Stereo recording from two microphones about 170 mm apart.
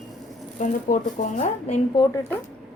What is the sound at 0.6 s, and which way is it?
Speech, 45° left (ahead or behind).